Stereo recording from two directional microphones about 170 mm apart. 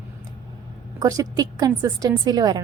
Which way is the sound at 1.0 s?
20° right (ahead or behind).